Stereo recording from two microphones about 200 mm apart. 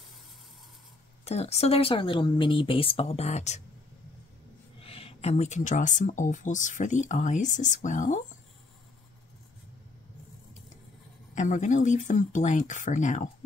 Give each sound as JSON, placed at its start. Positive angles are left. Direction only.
{"t": 1.2, "sound": "speech", "side_deg": 30}
{"t": 4.7, "sound": "speech", "side_deg": 30}
{"t": 11.3, "sound": "speech", "side_deg": 40}